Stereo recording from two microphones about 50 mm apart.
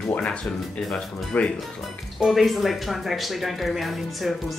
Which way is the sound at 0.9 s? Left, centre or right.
Left.